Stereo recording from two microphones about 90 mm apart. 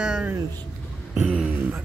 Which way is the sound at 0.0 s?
10° right (ahead or behind).